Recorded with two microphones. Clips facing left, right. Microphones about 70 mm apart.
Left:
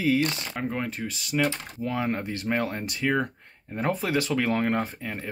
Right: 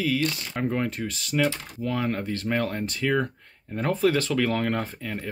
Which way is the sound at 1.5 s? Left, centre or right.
Left.